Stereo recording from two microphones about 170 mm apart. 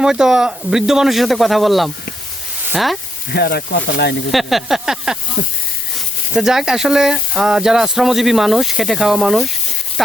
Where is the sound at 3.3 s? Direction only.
65° left (ahead or behind).